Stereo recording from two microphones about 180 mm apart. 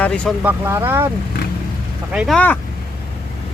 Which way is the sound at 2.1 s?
5° right (ahead or behind).